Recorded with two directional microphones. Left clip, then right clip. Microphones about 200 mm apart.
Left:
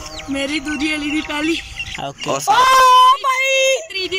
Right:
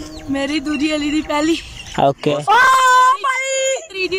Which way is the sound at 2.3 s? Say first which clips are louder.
Right 1 dB; 10° left (ahead or behind).